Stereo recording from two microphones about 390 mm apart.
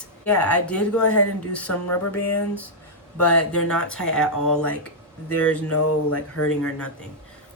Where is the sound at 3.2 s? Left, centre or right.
Centre.